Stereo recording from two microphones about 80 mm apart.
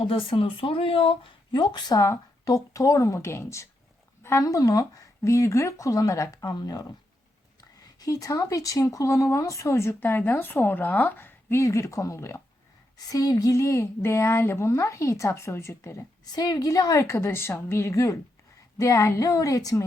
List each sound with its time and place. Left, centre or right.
0.0 s speech: left
1.2 s speech: left
2.0 s speech: left
4.2 s a sound: left
4.4 s speech: left
7.9 s speech: left
11.6 s speech: left
13.0 s speech: left
16.2 s speech: left
17.0 s speech: left